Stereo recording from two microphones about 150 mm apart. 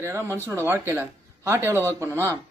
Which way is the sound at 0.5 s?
15° right (ahead or behind).